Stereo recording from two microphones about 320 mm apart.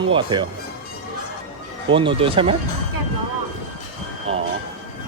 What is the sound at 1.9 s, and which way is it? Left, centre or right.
Speech, centre.